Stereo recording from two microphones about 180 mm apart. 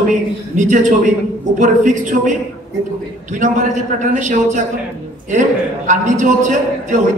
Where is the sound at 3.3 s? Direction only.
45° right (ahead or behind).